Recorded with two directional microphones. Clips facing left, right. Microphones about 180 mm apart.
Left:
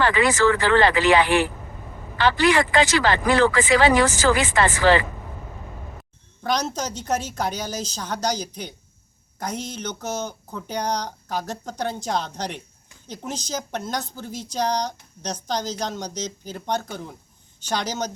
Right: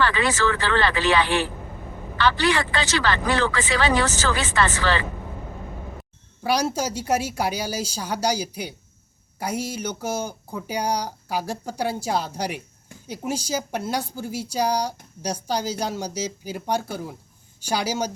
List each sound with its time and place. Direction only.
0.0 s speech: 15° left (ahead or behind)
6.4 s speech: 10° right (ahead or behind)